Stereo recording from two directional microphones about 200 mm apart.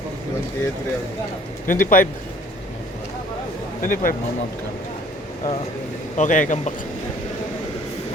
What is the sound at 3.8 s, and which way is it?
Speech, 40° left (ahead or behind).